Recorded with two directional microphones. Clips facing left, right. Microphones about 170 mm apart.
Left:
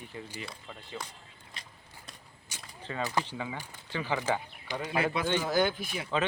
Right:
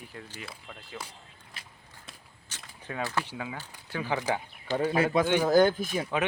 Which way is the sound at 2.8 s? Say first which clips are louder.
Even; 10° right (ahead or behind).